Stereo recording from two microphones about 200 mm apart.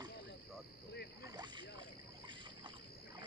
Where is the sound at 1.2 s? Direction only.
20° right (ahead or behind).